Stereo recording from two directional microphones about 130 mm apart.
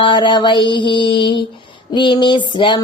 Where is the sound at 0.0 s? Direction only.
40° left (ahead or behind).